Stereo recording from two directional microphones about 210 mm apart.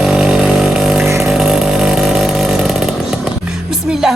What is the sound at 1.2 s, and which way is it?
Chainsaw, centre (ahead or behind).